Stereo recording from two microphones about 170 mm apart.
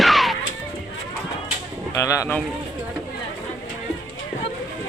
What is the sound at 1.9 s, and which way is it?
Speech, 20° left (ahead or behind).